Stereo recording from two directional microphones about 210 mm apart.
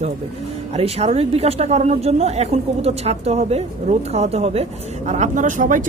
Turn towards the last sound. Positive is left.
turn(degrees=-40)  # may be behind; listen again after turning